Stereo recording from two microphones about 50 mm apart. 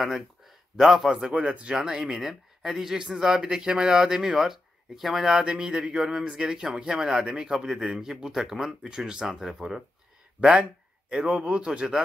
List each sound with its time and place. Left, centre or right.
0.7 s a man's voice: centre
1.3 s speech: right; by 5.4 s centre
5.4 s speech: centre
6.1 s a man's voice: centre
6.4 s a man's voice: centre